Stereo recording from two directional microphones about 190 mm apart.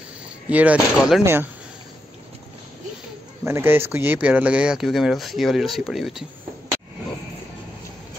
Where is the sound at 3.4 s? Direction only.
10° right (ahead or behind).